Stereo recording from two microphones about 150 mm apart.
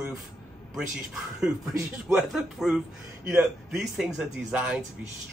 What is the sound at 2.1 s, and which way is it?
A man's voice, 5° right (ahead or behind).